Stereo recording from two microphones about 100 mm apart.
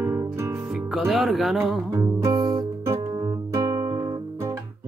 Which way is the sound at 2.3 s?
55° right (ahead or behind).